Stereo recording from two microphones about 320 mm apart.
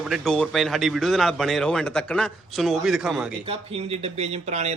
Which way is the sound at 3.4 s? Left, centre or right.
Centre.